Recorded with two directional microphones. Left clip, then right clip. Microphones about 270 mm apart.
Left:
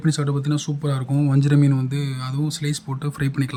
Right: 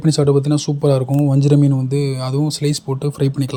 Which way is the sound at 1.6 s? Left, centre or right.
Left.